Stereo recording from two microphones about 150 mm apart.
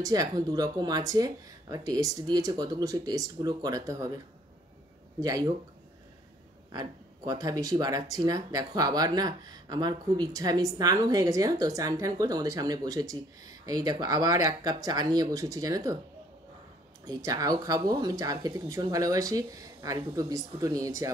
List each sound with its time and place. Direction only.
0.0 s speech: 25° right (ahead or behind)
5.2 s speech: 25° right (ahead or behind)
6.7 s speech: 25° right (ahead or behind)
17.0 s speech: 25° right (ahead or behind)